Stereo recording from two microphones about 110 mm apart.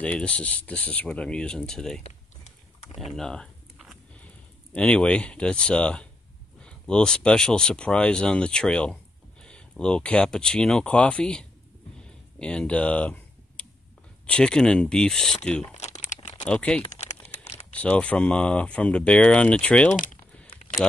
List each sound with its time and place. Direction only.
0.0 s speech: 10° left (ahead or behind)
2.0 s a sound: 90° left
3.0 s speech: centre (ahead or behind)
3.7 s a sound: centre (ahead or behind)
4.7 s speech: 10° left (ahead or behind)
15.7 s crumpling: 90° left
16.4 s speech: 10° left (ahead or behind)
16.9 s crumpling: 90° left; by 17.6 s 70° left (ahead or behind)
17.7 s speech: 10° left (ahead or behind)